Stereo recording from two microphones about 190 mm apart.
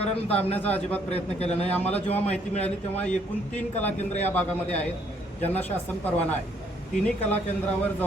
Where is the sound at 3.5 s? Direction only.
10° left (ahead or behind).